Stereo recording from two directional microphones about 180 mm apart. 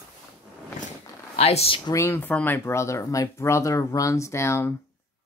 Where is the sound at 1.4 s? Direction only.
35° left (ahead or behind).